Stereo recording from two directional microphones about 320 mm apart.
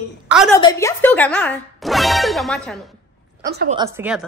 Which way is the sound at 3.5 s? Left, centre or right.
Right.